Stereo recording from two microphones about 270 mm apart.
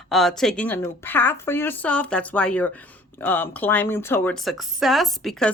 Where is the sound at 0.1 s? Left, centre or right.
Centre.